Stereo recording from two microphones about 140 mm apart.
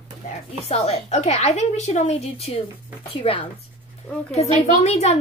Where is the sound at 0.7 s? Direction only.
45° left (ahead or behind).